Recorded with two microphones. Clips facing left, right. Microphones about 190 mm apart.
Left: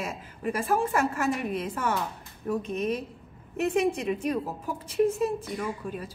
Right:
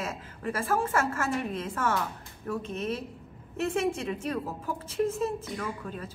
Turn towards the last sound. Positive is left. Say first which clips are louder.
# left 3 dB
turn(degrees=15)  # may be behind; listen again after turning